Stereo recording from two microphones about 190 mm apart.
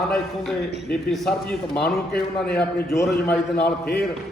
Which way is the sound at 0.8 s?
Centre (ahead or behind).